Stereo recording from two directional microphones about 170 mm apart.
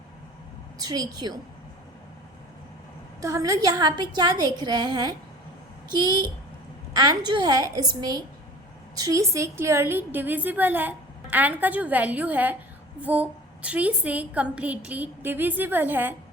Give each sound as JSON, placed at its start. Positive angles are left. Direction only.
{"t": 0.8, "sound": "a woman's voice", "side_deg": -20}
{"t": 3.2, "sound": "a woman's voice", "side_deg": -20}
{"t": 6.9, "sound": "a woman's voice", "side_deg": -20}